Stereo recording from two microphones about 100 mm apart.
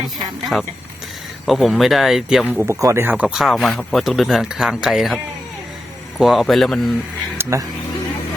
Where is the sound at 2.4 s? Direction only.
15° right (ahead or behind).